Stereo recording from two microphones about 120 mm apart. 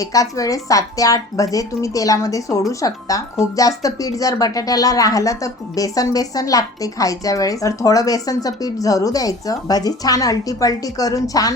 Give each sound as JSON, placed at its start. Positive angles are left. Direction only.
{"t": 0.0, "sound": "a woman's voice", "side_deg": 30}